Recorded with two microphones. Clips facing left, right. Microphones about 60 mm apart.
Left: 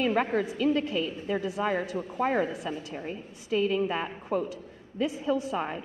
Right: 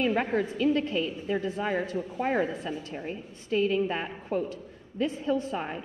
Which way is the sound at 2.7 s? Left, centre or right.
Centre.